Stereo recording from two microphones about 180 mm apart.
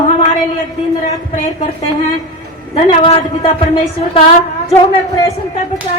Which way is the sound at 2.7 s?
30° left (ahead or behind).